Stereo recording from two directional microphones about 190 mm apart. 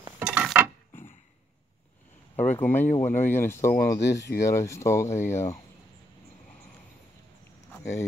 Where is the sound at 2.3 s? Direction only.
35° left (ahead or behind).